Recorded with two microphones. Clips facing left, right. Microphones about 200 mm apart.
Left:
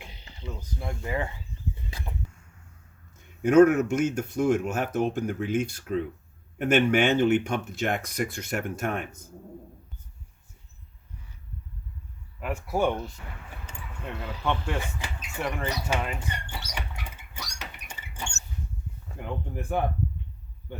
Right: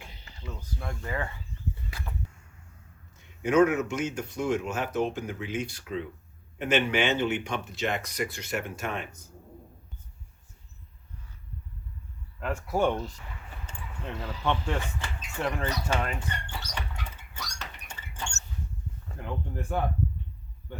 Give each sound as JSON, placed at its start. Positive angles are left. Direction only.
{"t": 0.0, "sound": "speech", "side_deg": 20}
{"t": 1.7, "sound": "a sound", "side_deg": 20}
{"t": 3.2, "sound": "speech", "side_deg": 50}
{"t": 12.4, "sound": "speech", "side_deg": 10}
{"t": 15.4, "sound": "speech", "side_deg": 0}
{"t": 15.9, "sound": "rodents", "side_deg": 10}
{"t": 19.0, "sound": "a sound", "side_deg": 15}